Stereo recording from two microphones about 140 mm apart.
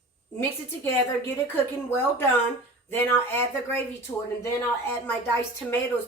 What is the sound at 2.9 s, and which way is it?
Speech, 15° left (ahead or behind).